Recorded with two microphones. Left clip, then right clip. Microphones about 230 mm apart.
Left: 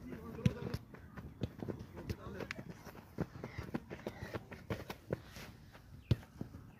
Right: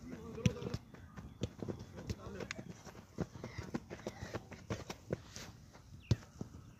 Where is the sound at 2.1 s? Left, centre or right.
Centre.